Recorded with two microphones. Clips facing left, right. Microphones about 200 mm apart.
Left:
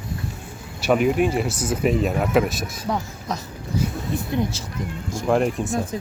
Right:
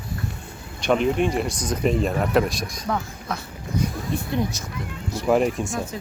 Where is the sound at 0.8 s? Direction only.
5° left (ahead or behind).